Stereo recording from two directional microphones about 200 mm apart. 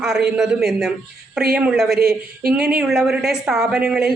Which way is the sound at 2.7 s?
5° right (ahead or behind).